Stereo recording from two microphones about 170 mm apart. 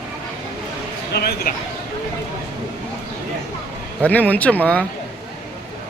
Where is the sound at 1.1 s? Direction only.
65° left (ahead or behind).